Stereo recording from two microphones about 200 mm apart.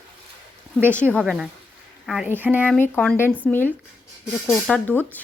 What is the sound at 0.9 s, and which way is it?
Speech, 5° left (ahead or behind).